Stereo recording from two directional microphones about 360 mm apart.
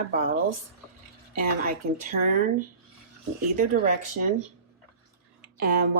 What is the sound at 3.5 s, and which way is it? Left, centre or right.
Speech, right.